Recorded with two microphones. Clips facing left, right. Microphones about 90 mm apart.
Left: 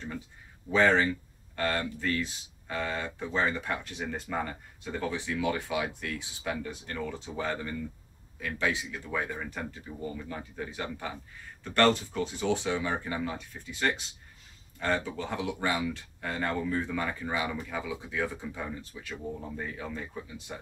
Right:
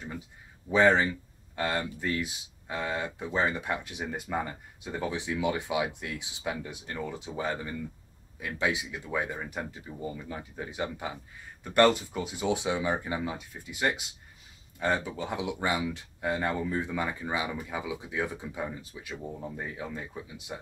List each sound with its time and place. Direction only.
0.7 s speech: 15° right (ahead or behind)